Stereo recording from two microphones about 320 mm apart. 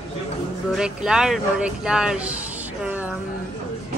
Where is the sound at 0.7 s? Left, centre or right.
Centre.